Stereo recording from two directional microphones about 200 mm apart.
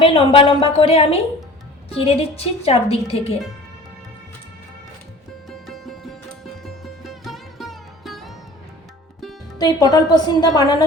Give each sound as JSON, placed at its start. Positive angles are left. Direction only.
{"t": 0.0, "sound": "a woman's voice", "side_deg": 25}
{"t": 5.5, "sound": "music", "side_deg": 0}
{"t": 6.7, "sound": "sitar", "side_deg": 0}
{"t": 9.6, "sound": "a woman's voice", "side_deg": 20}